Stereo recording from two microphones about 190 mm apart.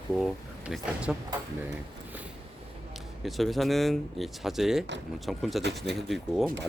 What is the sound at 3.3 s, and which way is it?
Speech, centre (ahead or behind).